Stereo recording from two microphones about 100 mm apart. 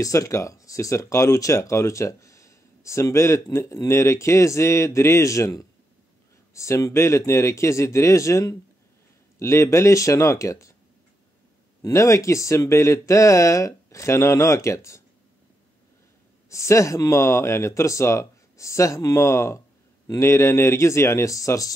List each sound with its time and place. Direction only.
0.0 s speech: 35° left (ahead or behind)
11.8 s speech: 30° left (ahead or behind)
16.4 s speech: 30° left (ahead or behind)